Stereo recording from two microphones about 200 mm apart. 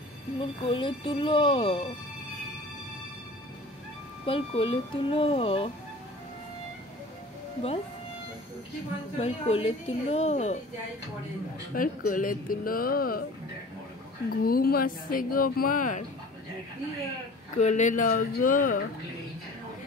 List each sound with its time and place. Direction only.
0.4 s speech: 25° left (ahead or behind)
4.3 s speech: 25° left (ahead or behind)
9.2 s a woman's voice: 30° left (ahead or behind)
11.7 s speech: 45° left (ahead or behind)
14.3 s speech: 45° left (ahead or behind)
17.6 s speech: 35° left (ahead or behind)